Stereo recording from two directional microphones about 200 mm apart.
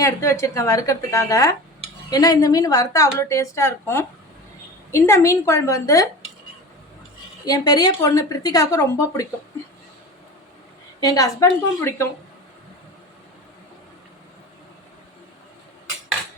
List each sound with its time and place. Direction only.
0.0 s a woman's voice: 15° left (ahead or behind)
7.4 s a woman's voice: 20° left (ahead or behind)
11.0 s a woman's voice: 15° left (ahead or behind)